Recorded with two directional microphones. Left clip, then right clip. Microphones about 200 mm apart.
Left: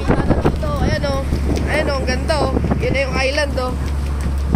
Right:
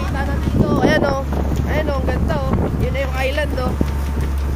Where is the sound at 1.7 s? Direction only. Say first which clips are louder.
Left 3 dB; centre (ahead or behind).